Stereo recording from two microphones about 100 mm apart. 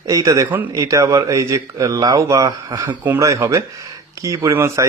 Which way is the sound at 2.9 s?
15° right (ahead or behind).